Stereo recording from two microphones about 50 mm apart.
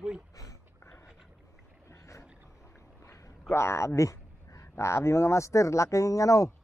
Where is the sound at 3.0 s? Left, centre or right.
Left.